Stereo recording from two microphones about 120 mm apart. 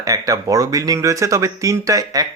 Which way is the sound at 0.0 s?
30° right (ahead or behind).